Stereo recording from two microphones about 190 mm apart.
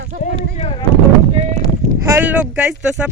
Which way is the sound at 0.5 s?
30° left (ahead or behind).